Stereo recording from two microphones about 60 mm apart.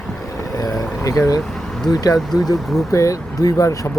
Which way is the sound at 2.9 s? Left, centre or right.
Left.